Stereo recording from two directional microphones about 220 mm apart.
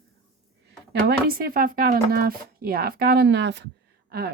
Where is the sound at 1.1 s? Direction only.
45° right (ahead or behind).